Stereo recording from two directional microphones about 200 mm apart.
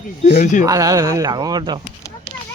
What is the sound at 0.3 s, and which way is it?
Speech, 40° left (ahead or behind).